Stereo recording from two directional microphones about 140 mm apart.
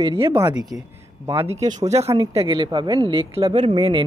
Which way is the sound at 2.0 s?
35° right (ahead or behind).